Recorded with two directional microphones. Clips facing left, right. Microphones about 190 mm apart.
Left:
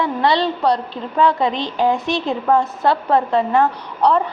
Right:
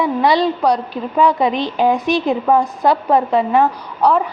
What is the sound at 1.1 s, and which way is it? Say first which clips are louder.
A woman's voice: right 2 dB; 15° right (ahead or behind).